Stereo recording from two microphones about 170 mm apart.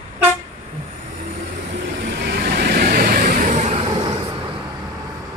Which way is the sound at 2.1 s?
70° right (ahead or behind).